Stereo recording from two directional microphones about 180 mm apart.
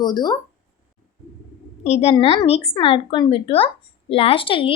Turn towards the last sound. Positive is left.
turn(degrees=30)  # may be behind; listen again after turning